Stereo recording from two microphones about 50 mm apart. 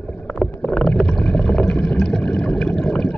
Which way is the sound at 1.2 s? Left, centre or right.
Centre.